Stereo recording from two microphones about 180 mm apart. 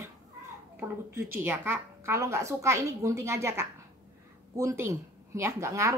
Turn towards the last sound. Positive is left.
turn(degrees=-15)  # may be behind; listen again after turning